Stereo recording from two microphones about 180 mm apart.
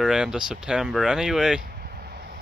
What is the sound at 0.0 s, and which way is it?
Speech, 5° right (ahead or behind).